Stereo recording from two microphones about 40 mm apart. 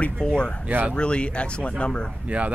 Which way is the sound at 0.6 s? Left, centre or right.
Right.